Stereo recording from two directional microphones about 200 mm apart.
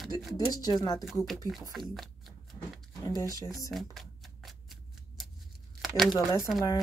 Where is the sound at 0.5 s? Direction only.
20° left (ahead or behind).